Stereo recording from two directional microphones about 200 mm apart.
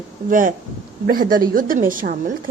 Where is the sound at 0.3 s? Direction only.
40° right (ahead or behind).